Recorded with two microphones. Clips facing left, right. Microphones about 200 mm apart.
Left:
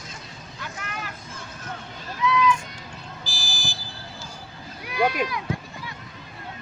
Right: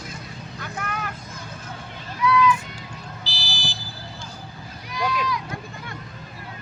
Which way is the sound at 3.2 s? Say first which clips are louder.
Right 1 dB; 50° left (ahead or behind).